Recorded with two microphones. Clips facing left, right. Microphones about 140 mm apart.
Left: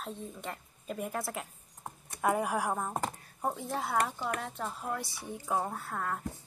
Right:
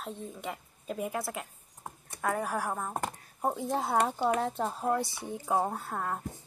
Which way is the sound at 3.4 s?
20° right (ahead or behind).